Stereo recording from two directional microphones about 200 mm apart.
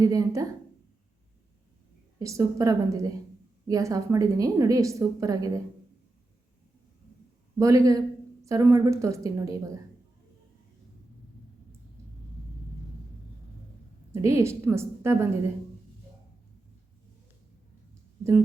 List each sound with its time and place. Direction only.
0.0 s a woman's voice: 15° right (ahead or behind)
2.1 s a woman's voice: 15° right (ahead or behind)
7.6 s a woman's voice: 15° right (ahead or behind)
14.1 s a woman's voice: 15° right (ahead or behind)
18.2 s speech: 15° right (ahead or behind)